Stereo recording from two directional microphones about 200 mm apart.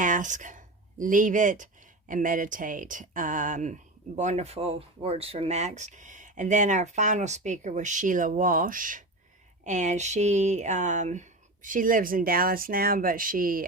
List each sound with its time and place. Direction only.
0.0 s speech: 40° right (ahead or behind)